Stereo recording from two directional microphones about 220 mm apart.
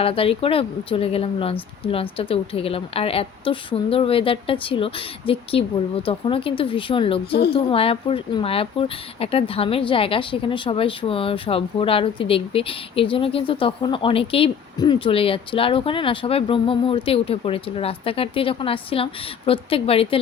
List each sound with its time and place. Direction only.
0.0 s speech: 25° left (ahead or behind)